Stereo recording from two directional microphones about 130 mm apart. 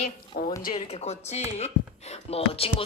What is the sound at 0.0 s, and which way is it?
Speech, 90° left.